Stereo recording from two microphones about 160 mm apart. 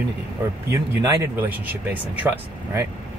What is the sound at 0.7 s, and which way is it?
Speech, 20° right (ahead or behind).